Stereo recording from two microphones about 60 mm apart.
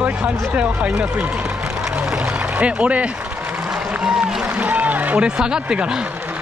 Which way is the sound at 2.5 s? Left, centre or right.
Right.